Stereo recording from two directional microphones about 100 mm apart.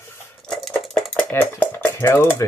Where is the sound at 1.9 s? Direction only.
25° left (ahead or behind).